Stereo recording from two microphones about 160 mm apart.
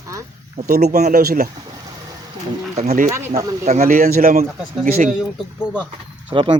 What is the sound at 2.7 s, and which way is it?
Speech, 50° right (ahead or behind).